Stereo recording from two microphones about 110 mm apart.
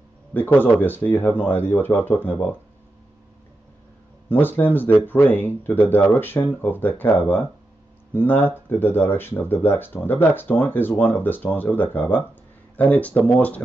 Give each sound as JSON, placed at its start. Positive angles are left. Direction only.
{"t": 0.3, "sound": "speech", "side_deg": 15}
{"t": 4.3, "sound": "speech", "side_deg": 20}